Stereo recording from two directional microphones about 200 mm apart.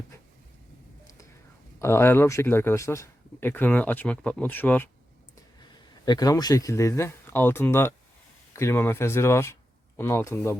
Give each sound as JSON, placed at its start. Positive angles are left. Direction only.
{"t": 1.8, "sound": "speech", "side_deg": 10}
{"t": 5.5, "sound": "speech", "side_deg": 20}